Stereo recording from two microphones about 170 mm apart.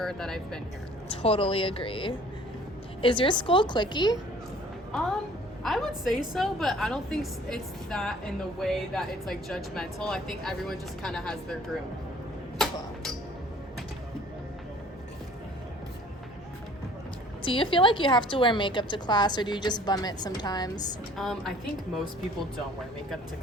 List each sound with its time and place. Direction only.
0.0 s speech: 5° left (ahead or behind)
1.1 s a woman's voice: 35° left (ahead or behind)
5.6 s speech: centre (ahead or behind)
17.4 s a woman's voice: 30° left (ahead or behind)
21.2 s speech: centre (ahead or behind)